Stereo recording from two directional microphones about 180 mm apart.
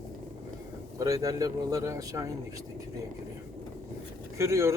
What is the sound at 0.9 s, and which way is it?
A man's voice, 20° right (ahead or behind).